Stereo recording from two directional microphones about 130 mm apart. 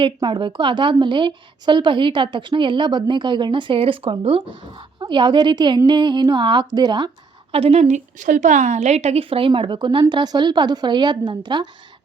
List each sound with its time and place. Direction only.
0.0 s a woman's voice: 40° right (ahead or behind)
7.5 s a woman's voice: 50° right (ahead or behind); by 11.7 s 35° right (ahead or behind)